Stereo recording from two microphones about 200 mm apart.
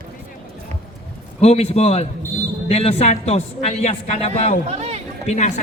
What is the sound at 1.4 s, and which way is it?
A man's voice, 30° left (ahead or behind).